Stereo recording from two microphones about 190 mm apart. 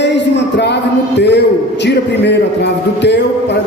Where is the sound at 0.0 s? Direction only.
65° left (ahead or behind).